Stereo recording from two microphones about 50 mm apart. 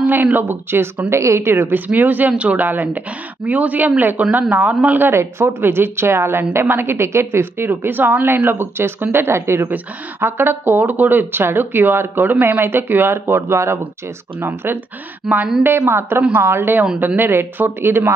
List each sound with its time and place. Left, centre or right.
0.0 s speech: right
1.1 s speech: right
2.0 s a man's voice: right
5.0 s speech: right
9.3 s speech: right
10.2 s speech: right
13.1 s speech: right
14.4 s speech: right
15.3 s a woman's voice: centre
15.9 s speech: right